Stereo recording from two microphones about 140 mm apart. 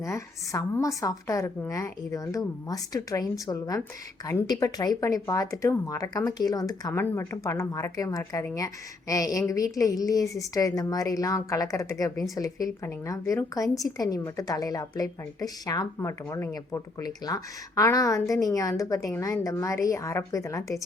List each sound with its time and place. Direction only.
0.0 s a woman's voice: 20° left (ahead or behind)